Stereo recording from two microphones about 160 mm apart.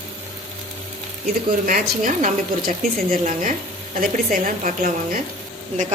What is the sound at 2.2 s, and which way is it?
A woman's voice, 60° right (ahead or behind).